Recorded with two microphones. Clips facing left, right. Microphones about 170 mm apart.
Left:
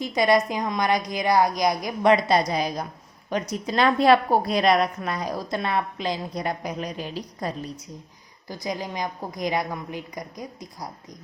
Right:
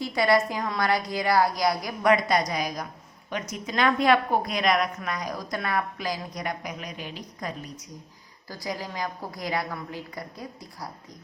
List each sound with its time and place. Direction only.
0.0 s a woman's voice: 20° left (ahead or behind)
8.4 s a woman's voice: 20° left (ahead or behind)